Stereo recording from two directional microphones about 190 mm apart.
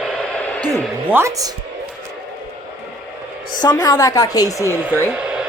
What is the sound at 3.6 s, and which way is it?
A woman's voice, 20° left (ahead or behind).